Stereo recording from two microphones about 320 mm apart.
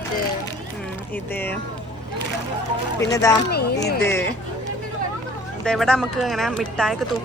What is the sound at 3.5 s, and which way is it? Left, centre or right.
Speech, left.